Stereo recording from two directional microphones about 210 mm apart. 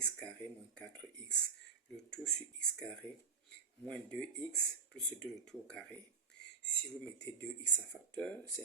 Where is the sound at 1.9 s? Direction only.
5° left (ahead or behind).